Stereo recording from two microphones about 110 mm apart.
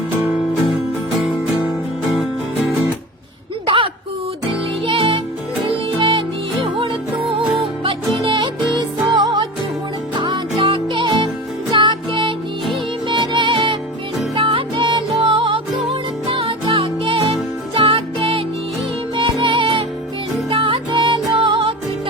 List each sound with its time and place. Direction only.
4.4 s music: 55° right (ahead or behind)